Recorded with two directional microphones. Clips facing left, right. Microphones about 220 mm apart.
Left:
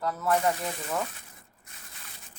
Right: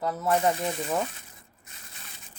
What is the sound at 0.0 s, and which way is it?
Speech, 25° right (ahead or behind).